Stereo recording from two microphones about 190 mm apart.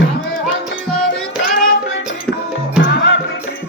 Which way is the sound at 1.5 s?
45° left (ahead or behind).